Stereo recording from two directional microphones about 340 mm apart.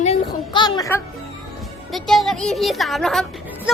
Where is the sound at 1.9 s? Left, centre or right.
Centre.